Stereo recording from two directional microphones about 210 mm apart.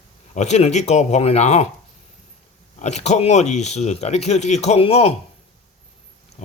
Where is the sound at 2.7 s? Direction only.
35° left (ahead or behind).